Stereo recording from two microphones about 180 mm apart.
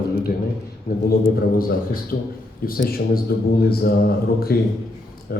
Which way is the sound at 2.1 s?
55° left (ahead or behind).